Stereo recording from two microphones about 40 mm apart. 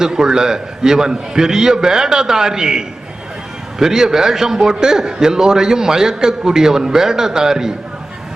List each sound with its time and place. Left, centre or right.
0.0 s a man's voice: centre